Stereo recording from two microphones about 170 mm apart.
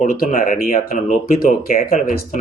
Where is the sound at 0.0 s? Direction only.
50° left (ahead or behind).